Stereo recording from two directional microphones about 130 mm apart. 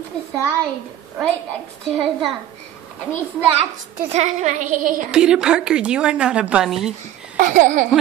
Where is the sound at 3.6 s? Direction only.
55° right (ahead or behind); by 5.0 s 90° right.